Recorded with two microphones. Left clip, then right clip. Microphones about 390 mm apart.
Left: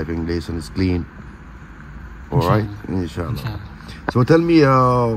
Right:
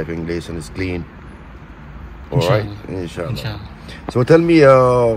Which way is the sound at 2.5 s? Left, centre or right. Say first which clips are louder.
Right 2 dB; centre.